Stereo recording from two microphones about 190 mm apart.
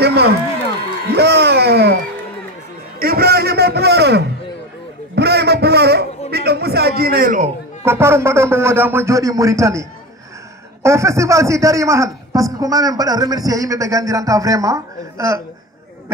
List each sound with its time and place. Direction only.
0.0 s a man's voice: 60° right (ahead or behind)
3.0 s a man's voice: 55° right (ahead or behind)
5.1 s a sound: 60° right (ahead or behind)
7.8 s a man's voice: 15° right (ahead or behind)